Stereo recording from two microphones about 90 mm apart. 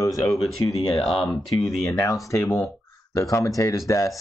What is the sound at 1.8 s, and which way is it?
Speech, 35° left (ahead or behind).